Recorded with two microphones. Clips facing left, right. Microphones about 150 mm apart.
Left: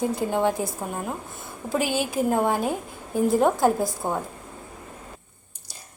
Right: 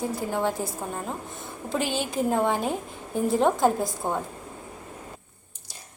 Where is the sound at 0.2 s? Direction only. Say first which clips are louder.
Left 3 dB; 20° left (ahead or behind); by 4.2 s 5° left (ahead or behind).